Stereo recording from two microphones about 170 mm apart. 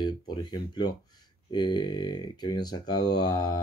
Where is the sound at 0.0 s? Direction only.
25° left (ahead or behind).